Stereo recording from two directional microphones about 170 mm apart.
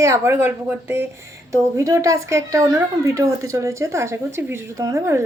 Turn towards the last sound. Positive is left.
turn(degrees=-15)  # may be behind; listen again after turning